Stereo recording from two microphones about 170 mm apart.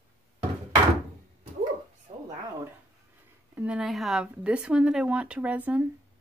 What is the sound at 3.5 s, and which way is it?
Speech, 10° right (ahead or behind).